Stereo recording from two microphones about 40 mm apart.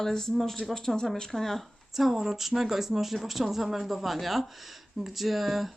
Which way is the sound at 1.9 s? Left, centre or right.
Centre.